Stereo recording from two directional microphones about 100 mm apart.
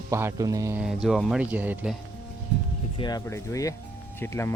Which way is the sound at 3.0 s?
40° left (ahead or behind).